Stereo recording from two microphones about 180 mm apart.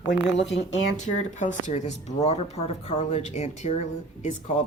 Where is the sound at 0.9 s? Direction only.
40° left (ahead or behind).